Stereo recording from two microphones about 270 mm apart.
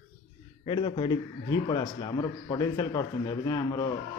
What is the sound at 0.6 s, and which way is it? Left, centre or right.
A man's voice, centre.